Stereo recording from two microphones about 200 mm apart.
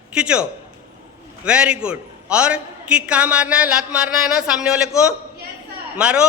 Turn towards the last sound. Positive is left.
turn(degrees=-5)  # may be behind; listen again after turning